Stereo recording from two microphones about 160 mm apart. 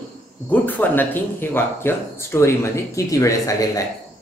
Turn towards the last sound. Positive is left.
turn(degrees=20)  # may be behind; listen again after turning